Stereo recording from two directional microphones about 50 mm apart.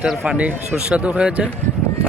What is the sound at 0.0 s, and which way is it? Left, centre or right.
Speech, right.